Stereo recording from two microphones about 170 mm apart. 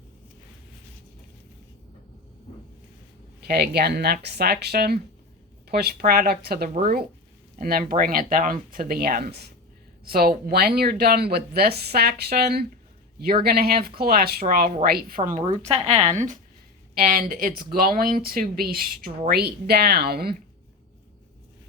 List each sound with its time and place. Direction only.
3.4 s speech: 65° right (ahead or behind)
15.7 s speech: 40° right (ahead or behind); by 20.3 s 65° right (ahead or behind)